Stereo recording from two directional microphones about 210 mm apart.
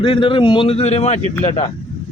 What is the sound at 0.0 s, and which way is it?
A man's voice, 25° left (ahead or behind).